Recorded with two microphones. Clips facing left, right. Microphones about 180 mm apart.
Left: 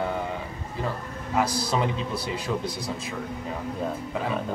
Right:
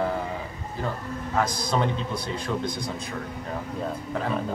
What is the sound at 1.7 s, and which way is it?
Speech, 5° left (ahead or behind).